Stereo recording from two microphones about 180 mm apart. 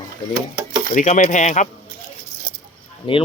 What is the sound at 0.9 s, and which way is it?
Speech, 45° left (ahead or behind).